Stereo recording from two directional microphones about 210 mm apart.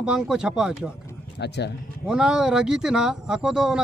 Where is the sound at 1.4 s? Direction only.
55° left (ahead or behind).